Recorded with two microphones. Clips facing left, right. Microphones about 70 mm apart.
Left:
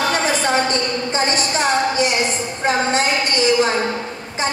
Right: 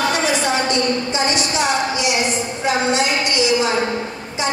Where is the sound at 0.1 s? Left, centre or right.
Left.